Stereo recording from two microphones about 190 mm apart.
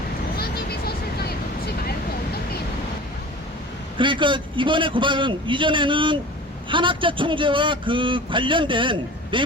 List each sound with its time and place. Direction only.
0.3 s vehicle: 55° left (ahead or behind)
3.9 s a man's voice: 25° right (ahead or behind)